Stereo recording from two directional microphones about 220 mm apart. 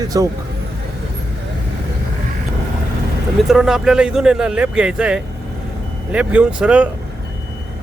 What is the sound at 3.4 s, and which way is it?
Speech, centre (ahead or behind).